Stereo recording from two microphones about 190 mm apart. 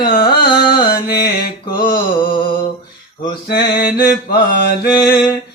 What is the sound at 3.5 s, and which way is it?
Mantra, 60° left (ahead or behind).